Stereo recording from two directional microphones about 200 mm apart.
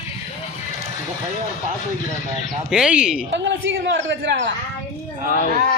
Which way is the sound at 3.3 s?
65° right (ahead or behind).